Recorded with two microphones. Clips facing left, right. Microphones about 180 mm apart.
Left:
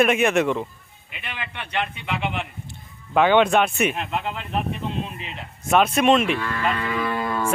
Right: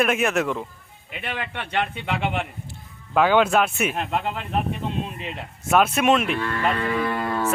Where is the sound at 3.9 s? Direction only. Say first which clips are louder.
Right 2 dB; 45° right (ahead or behind).